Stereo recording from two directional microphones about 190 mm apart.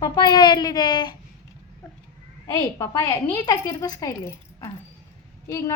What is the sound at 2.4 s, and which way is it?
A woman's voice, 15° left (ahead or behind).